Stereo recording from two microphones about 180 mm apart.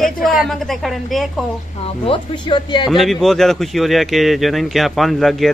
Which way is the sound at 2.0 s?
25° left (ahead or behind).